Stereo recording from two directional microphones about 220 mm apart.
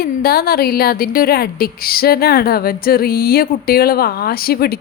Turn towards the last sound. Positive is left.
turn(degrees=45)  # may be behind; listen again after turning